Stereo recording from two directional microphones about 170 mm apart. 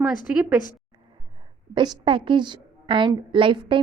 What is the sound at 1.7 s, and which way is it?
A woman's voice, 30° right (ahead or behind).